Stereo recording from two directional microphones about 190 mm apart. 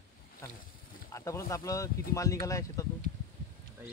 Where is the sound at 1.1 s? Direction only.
15° left (ahead or behind).